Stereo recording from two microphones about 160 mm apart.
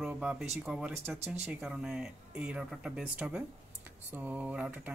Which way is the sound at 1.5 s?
5° right (ahead or behind).